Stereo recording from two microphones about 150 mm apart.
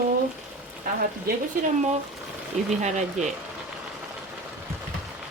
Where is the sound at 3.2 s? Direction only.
55° right (ahead or behind).